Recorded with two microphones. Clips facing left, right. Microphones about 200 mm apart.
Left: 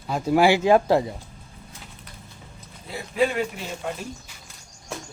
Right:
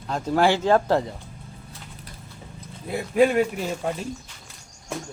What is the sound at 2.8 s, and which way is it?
Speech, 55° right (ahead or behind).